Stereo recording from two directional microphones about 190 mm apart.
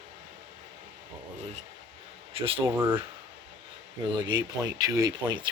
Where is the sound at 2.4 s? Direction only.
30° right (ahead or behind).